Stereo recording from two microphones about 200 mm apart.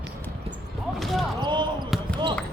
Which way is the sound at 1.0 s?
Centre (ahead or behind).